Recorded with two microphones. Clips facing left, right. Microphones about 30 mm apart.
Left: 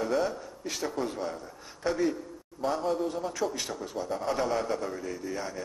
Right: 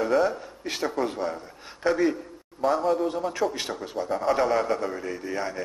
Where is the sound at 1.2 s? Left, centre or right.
Centre.